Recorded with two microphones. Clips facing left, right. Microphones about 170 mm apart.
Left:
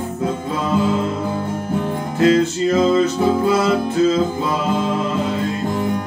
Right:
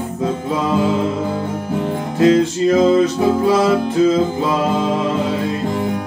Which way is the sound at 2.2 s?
15° right (ahead or behind).